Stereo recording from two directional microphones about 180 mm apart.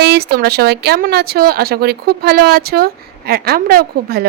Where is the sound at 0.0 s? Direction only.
65° right (ahead or behind).